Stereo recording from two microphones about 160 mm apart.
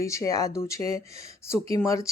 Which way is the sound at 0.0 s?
20° left (ahead or behind).